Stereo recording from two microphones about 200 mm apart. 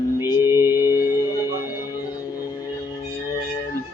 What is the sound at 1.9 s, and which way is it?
Music, 20° left (ahead or behind).